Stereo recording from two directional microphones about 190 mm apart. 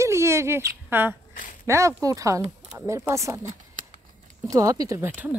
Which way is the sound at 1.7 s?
15° right (ahead or behind).